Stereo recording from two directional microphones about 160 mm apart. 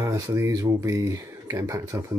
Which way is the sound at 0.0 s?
20° right (ahead or behind).